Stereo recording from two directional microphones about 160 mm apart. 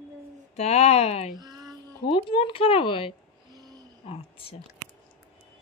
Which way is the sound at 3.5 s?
25° right (ahead or behind).